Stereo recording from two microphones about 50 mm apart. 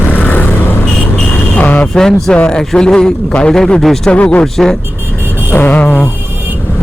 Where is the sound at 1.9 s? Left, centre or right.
Centre.